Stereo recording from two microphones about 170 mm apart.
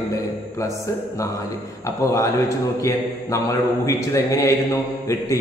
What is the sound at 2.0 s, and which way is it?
A man's voice, 20° left (ahead or behind).